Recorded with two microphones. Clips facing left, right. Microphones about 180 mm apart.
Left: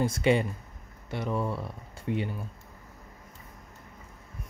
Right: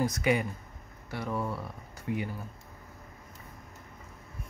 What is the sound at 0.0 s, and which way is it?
Speech, 30° left (ahead or behind).